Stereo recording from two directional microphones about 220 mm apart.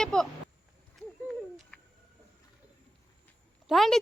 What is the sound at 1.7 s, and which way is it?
Bird, 5° left (ahead or behind).